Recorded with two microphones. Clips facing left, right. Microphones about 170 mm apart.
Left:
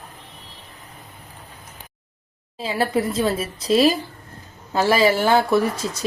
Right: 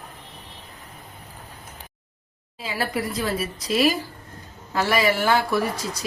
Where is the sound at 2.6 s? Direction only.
30° left (ahead or behind).